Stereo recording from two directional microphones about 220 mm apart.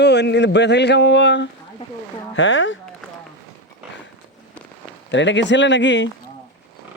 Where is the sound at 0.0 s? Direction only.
50° left (ahead or behind).